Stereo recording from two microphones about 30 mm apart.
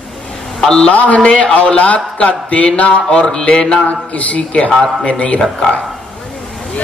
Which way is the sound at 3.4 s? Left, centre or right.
Left.